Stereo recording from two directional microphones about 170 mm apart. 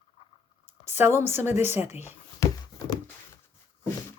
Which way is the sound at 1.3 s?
15° right (ahead or behind).